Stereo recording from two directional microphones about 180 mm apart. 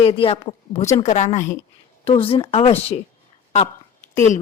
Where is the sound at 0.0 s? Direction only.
30° left (ahead or behind).